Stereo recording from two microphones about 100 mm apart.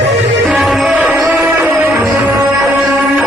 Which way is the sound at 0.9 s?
15° right (ahead or behind).